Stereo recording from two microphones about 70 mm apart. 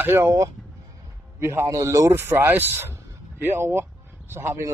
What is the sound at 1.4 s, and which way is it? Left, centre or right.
Speech, right.